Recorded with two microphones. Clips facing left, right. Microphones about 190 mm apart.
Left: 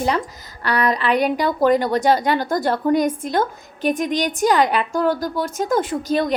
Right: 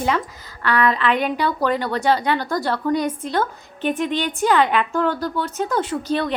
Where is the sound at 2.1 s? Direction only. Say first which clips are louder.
Left 2 dB; 40° left (ahead or behind).